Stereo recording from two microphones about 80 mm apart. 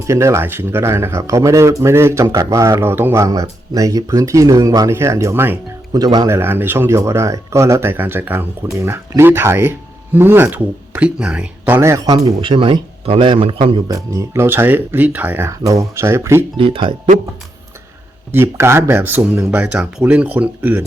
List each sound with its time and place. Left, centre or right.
0.1 s speech: right
2.8 s speech: right
5.9 s speech: right
6.2 s speech: right; by 11.4 s centre
11.6 s speech: right
12.0 s a man's voice: right
13.8 s speech: right
14.4 s speech: right
15.4 s speech: right
18.3 s speech: right